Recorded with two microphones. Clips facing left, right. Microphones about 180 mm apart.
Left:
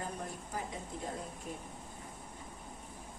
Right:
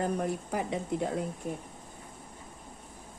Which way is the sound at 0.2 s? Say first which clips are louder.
Right 10 dB; 80° right.